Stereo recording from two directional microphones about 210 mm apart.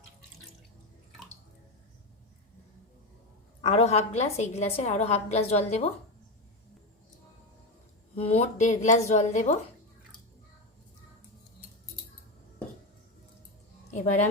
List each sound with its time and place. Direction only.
3.6 s a woman's voice: 30° left (ahead or behind)
8.1 s a woman's voice: 30° left (ahead or behind)
13.9 s a sound: 35° left (ahead or behind)